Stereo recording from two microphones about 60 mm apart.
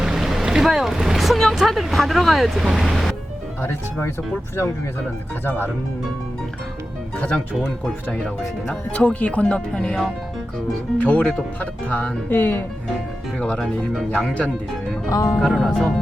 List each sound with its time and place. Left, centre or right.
0.0 s speech: centre
8.9 s speech: left
10.9 s speech: left
13.6 s speech: centre
15.1 s speech: left
15.4 s speech: centre